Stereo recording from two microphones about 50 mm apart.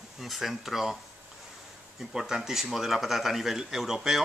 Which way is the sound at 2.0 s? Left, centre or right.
Centre.